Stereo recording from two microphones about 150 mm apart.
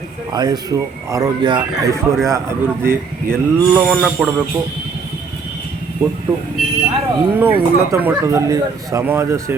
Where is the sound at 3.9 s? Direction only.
Centre (ahead or behind).